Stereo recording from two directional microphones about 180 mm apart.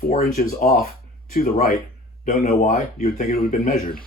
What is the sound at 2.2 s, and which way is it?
Speech, 40° left (ahead or behind).